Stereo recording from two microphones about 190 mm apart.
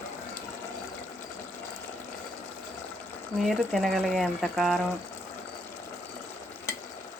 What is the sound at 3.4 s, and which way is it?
Speech, centre (ahead or behind).